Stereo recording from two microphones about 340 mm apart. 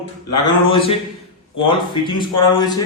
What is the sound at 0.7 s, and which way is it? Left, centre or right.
Speech, centre.